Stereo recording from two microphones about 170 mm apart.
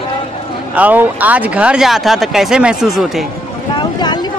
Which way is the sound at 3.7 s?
25° left (ahead or behind).